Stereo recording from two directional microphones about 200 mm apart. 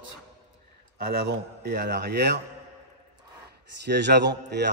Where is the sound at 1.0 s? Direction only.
50° right (ahead or behind).